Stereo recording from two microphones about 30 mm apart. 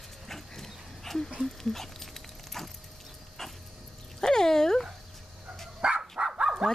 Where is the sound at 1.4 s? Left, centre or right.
Centre.